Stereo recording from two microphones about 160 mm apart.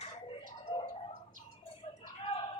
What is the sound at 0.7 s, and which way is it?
Tick-tock, 30° left (ahead or behind).